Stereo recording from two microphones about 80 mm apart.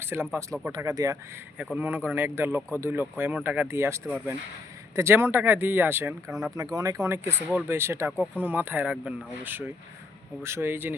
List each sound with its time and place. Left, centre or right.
0.0 s speech: right
0.8 s speech: right
1.7 s speech: right
3.7 s speech: right
6.6 s speech: right